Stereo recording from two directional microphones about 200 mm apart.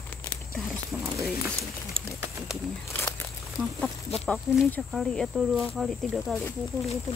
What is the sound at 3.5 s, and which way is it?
Speech, centre (ahead or behind).